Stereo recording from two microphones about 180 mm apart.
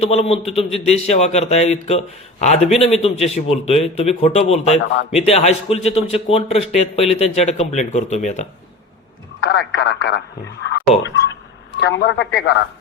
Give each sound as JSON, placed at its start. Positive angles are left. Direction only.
{"t": 0.0, "sound": "a man's voice", "side_deg": 35}
{"t": 9.5, "sound": "speech", "side_deg": 85}